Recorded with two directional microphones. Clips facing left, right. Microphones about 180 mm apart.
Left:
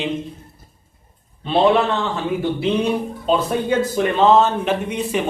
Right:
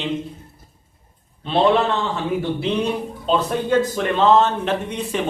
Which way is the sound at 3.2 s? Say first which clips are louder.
Left 1 dB; 10° left (ahead or behind).